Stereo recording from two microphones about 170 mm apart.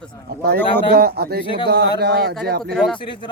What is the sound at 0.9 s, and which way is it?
Speech, 70° right (ahead or behind).